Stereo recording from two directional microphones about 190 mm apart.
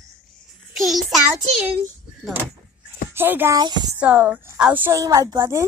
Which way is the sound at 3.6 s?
20° right (ahead or behind).